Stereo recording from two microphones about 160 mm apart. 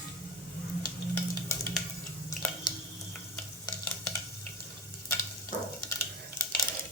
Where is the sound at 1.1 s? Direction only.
15° left (ahead or behind).